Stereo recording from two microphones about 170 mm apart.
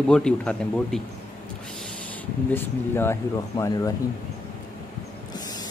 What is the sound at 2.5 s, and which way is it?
Speech, 15° left (ahead or behind).